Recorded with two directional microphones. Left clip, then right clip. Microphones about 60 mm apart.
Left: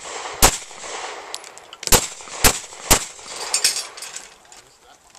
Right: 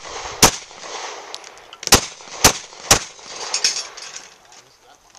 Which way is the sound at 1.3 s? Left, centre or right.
Centre.